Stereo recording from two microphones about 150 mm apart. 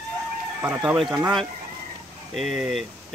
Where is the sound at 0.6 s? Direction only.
10° right (ahead or behind).